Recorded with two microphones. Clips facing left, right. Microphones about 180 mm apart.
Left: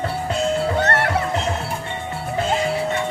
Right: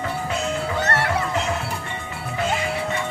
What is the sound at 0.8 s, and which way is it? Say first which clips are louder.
Music: left 3 dB; 55° left (ahead or behind).